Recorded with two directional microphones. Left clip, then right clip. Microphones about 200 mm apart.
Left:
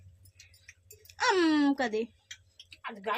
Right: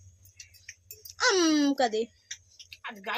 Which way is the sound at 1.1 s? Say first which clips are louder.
Right 2 dB; 25° left (ahead or behind).